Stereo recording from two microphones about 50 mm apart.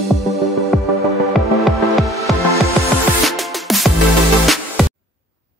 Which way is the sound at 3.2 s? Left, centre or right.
Centre.